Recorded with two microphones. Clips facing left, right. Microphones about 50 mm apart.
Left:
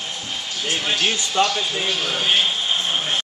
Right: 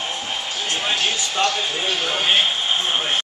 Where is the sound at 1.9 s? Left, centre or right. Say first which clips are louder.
Right 2 dB; centre.